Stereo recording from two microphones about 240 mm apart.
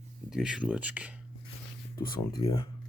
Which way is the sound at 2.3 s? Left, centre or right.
Centre.